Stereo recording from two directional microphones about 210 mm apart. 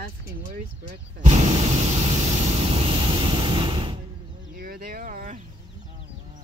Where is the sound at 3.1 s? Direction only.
20° right (ahead or behind).